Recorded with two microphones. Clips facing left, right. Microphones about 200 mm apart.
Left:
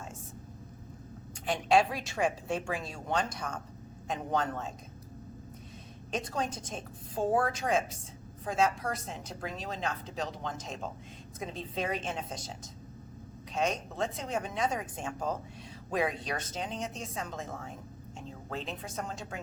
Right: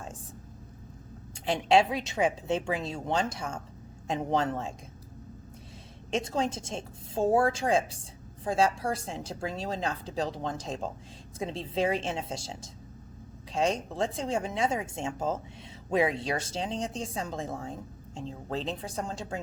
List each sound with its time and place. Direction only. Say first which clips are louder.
1.5 s a woman's voice: right 3 dB; 25° right (ahead or behind)
6.1 s a woman's voice: right 5 dB; 25° right (ahead or behind)